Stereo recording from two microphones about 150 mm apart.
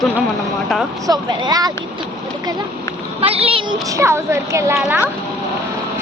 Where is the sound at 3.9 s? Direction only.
20° right (ahead or behind).